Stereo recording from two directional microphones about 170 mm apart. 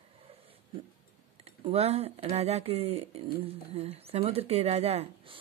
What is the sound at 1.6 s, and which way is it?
Speech, 35° right (ahead or behind).